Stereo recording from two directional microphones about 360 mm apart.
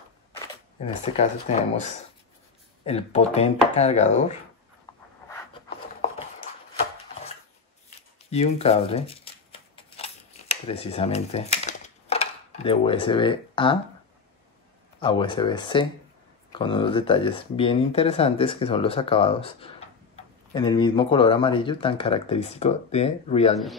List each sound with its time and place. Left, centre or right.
0.7 s speech: centre
4.9 s a sound: centre
8.3 s shuffling cards: centre
15.0 s speech: centre